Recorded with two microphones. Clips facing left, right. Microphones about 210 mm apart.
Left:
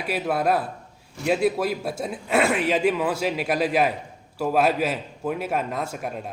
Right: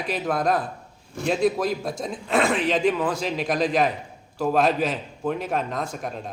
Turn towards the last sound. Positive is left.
turn(degrees=5)  # may be behind; listen again after turning